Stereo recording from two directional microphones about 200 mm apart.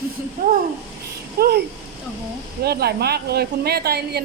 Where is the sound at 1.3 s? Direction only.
50° right (ahead or behind).